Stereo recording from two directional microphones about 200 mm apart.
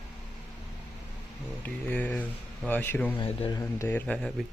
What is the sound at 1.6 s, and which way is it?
Speech, 10° left (ahead or behind).